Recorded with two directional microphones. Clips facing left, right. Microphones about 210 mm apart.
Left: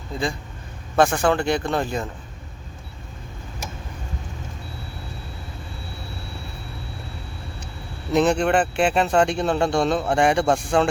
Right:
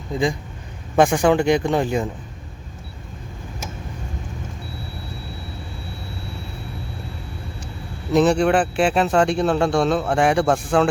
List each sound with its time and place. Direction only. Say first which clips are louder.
0.1 s speech: right 5 dB; 15° right (ahead or behind)
8.1 s speech: right 2 dB; centre (ahead or behind)